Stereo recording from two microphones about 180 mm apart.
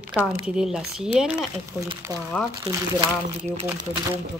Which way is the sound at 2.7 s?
30° right (ahead or behind).